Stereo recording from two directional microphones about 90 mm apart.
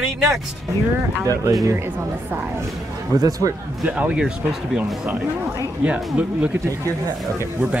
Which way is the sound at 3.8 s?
15° right (ahead or behind).